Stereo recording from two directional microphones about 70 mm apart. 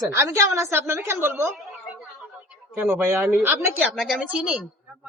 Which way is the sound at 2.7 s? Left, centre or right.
Right.